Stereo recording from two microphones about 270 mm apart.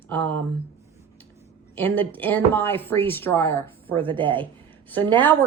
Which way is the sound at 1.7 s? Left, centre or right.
Centre.